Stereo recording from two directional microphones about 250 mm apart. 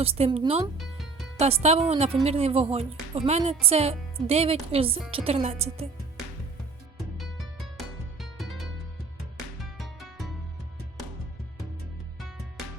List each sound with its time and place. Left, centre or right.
0.0 s speech: right
0.8 s music: centre
1.4 s speech: right
8.2 s music: centre
9.7 s music: centre